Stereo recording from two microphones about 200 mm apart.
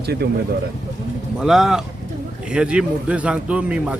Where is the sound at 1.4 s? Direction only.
Centre (ahead or behind).